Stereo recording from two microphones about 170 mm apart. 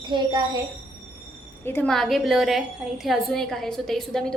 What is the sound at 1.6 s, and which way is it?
A woman's voice, 10° left (ahead or behind).